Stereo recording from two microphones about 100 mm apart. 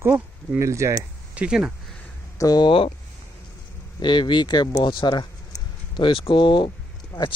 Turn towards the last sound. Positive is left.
turn(degrees=40)  # may be behind; listen again after turning